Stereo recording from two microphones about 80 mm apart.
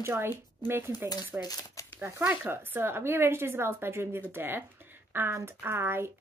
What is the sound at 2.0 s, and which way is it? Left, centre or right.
A woman's voice, right.